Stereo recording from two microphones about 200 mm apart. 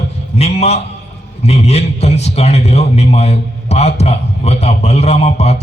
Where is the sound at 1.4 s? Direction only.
35° left (ahead or behind).